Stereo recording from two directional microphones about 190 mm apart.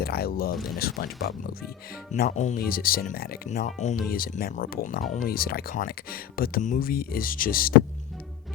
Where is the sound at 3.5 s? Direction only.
40° left (ahead or behind).